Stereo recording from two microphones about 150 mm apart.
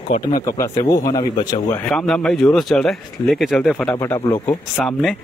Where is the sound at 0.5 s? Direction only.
20° left (ahead or behind).